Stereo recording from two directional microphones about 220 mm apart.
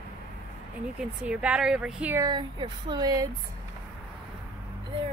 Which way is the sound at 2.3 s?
20° right (ahead or behind).